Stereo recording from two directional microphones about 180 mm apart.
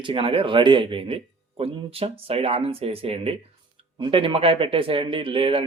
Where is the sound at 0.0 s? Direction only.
30° right (ahead or behind).